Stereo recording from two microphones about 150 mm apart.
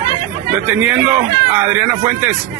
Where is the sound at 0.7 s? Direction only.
10° right (ahead or behind).